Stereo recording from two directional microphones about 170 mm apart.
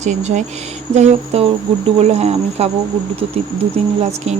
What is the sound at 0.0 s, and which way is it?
Speech, 45° right (ahead or behind).